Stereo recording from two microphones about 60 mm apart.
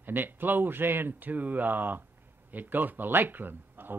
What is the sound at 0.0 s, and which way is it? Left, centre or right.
Speech, right.